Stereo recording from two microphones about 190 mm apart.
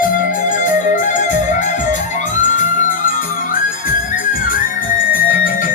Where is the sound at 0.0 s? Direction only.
45° left (ahead or behind).